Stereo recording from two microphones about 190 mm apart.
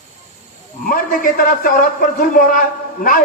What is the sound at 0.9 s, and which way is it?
A man's voice, 50° left (ahead or behind).